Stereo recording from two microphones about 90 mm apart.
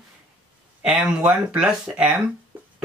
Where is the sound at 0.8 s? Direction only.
5° right (ahead or behind).